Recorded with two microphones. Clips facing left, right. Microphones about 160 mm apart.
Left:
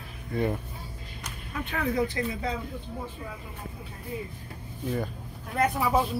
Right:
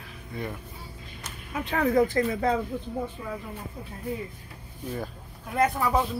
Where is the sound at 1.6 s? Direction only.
45° right (ahead or behind).